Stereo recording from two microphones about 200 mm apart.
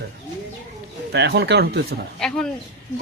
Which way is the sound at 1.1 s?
55° right (ahead or behind).